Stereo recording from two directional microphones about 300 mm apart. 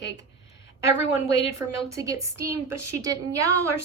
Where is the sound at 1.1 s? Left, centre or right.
Centre.